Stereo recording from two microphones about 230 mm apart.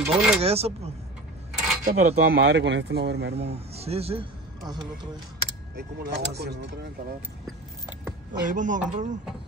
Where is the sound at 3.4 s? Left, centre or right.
Right.